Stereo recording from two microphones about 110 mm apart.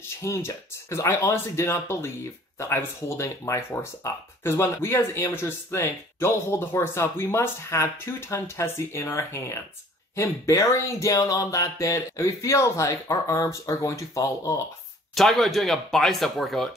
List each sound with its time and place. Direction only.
0.2 s speech: 25° left (ahead or behind)
15.1 s speech: centre (ahead or behind)